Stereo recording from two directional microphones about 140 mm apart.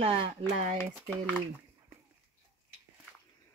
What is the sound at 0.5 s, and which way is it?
Speech, 55° right (ahead or behind).